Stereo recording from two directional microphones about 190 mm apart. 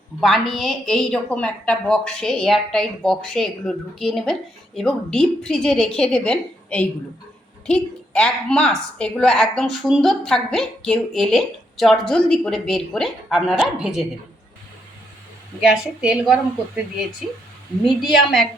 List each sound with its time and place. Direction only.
0.2 s a woman's voice: centre (ahead or behind)
15.7 s a woman's voice: 5° right (ahead or behind)